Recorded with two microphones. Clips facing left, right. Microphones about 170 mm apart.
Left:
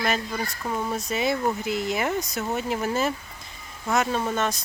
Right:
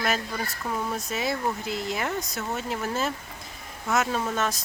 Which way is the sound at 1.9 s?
Centre (ahead or behind).